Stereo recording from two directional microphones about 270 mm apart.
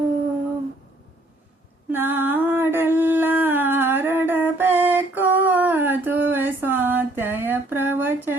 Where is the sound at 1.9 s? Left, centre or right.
Centre.